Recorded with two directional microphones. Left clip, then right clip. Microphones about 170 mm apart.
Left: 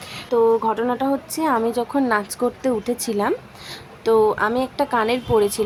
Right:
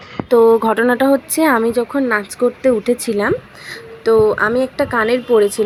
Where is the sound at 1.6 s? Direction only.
5° right (ahead or behind).